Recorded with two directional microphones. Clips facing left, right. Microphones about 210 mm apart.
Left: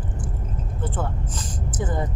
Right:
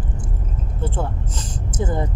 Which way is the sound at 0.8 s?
25° right (ahead or behind).